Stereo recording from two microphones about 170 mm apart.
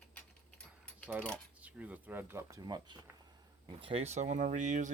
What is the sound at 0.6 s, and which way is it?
Keys jangling, 5° left (ahead or behind).